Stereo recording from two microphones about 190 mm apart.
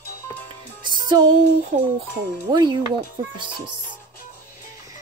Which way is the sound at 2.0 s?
25° right (ahead or behind).